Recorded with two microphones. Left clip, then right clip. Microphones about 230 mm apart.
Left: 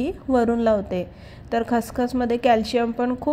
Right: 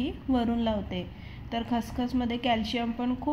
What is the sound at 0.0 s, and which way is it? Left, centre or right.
A woman's voice, left.